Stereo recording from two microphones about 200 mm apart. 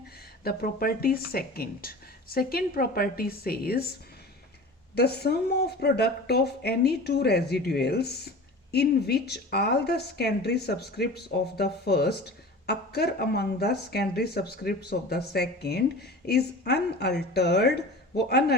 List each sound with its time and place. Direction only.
0.4 s speech: 45° left (ahead or behind)
4.9 s speech: 55° left (ahead or behind)